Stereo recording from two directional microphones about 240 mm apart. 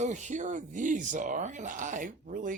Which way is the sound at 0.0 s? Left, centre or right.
Right.